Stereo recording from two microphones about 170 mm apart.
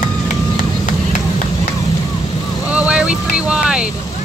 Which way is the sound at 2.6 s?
5° right (ahead or behind).